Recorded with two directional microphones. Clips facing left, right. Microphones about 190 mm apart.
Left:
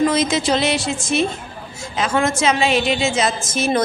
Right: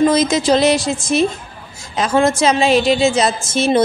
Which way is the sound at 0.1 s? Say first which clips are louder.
Right 4 dB; 40° right (ahead or behind).